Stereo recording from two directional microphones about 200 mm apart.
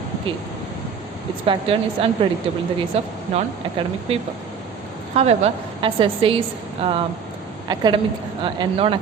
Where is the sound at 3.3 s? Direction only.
30° right (ahead or behind).